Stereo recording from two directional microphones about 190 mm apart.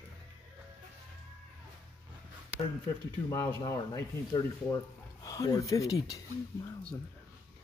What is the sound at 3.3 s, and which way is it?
Speech, 15° left (ahead or behind).